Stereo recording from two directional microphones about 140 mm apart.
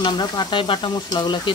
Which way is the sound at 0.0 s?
30° left (ahead or behind).